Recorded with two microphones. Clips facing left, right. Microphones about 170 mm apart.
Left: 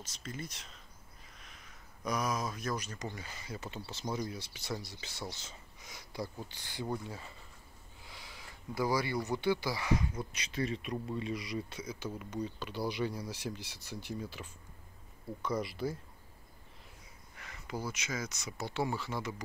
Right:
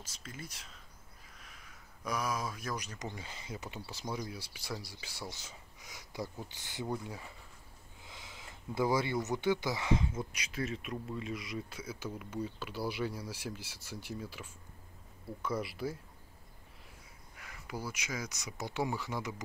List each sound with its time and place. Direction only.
0.0 s speech: 5° right (ahead or behind)
2.0 s speech: 5° right (ahead or behind); by 10.2 s 25° right (ahead or behind)
10.3 s speech: 5° right (ahead or behind)
17.4 s speech: 5° right (ahead or behind)